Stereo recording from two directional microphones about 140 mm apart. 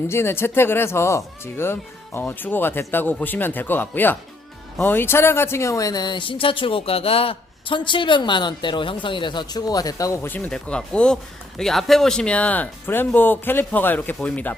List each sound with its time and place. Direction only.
0.1 s speech: 15° left (ahead or behind)
10.2 s speech: 10° left (ahead or behind)